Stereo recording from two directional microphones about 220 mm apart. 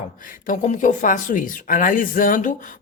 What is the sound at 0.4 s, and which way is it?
Speech, 35° left (ahead or behind).